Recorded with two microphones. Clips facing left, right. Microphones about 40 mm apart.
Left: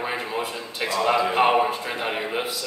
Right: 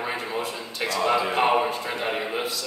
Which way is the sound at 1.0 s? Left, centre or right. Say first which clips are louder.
Left 2 dB; centre.